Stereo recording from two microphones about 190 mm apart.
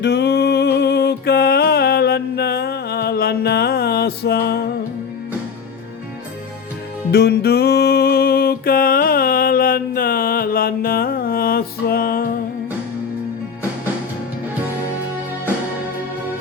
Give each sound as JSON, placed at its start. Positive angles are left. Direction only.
{"t": 0.0, "sound": "music", "side_deg": 60}
{"t": 7.1, "sound": "music", "side_deg": 60}